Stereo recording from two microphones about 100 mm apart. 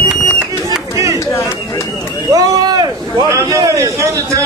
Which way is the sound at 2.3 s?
40° right (ahead or behind).